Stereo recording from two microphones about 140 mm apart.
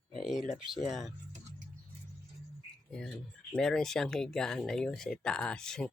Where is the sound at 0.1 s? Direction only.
Centre (ahead or behind).